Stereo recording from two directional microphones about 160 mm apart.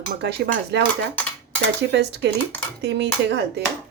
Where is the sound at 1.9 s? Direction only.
90° right.